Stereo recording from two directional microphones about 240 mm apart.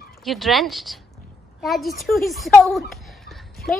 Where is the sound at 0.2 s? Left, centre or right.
Centre.